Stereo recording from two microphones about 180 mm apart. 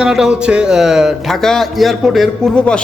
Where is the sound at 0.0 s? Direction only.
5° right (ahead or behind).